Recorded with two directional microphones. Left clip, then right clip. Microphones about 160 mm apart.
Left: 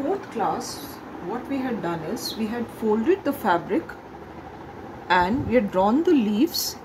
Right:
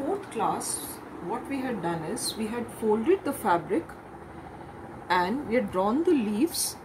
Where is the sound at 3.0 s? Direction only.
15° left (ahead or behind).